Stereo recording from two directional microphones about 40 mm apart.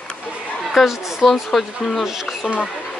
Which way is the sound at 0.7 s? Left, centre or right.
Centre.